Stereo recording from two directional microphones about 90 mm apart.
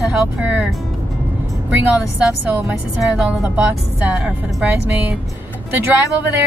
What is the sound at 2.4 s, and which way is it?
A woman's voice, 20° right (ahead or behind).